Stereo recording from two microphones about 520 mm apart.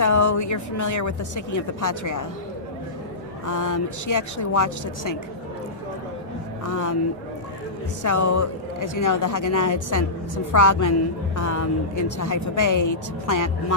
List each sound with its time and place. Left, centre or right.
0.0 s a woman's voice: left
3.4 s speech: left
6.7 s speech: left
8.0 s speech: left